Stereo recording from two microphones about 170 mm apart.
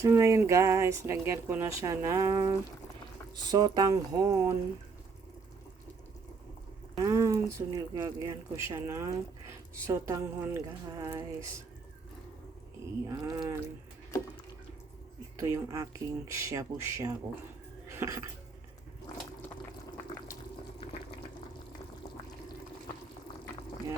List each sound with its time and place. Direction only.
0.0 s speech: 15° right (ahead or behind)
6.9 s speech: 20° right (ahead or behind)
13.1 s speech: 20° right (ahead or behind)
15.4 s speech: 15° right (ahead or behind)
17.8 s music: 15° right (ahead or behind)